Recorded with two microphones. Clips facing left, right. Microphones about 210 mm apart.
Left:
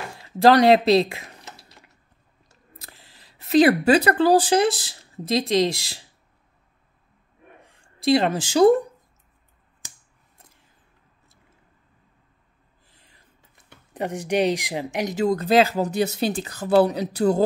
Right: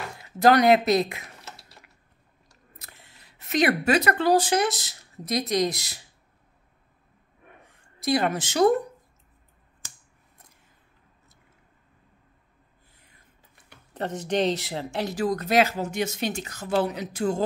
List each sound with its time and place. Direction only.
0.2 s speech: 30° left (ahead or behind)
2.8 s speech: 30° left (ahead or behind)
8.0 s speech: 25° left (ahead or behind)
13.9 s speech: 15° left (ahead or behind); by 17.5 s 35° left (ahead or behind)